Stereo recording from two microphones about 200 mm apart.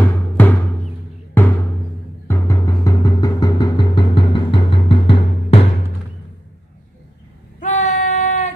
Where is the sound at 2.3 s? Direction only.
15° left (ahead or behind).